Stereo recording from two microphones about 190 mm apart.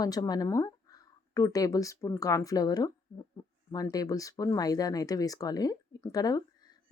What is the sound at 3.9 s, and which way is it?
Speech, 20° left (ahead or behind).